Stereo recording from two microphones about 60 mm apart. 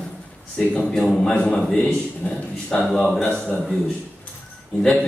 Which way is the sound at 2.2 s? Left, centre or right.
Left.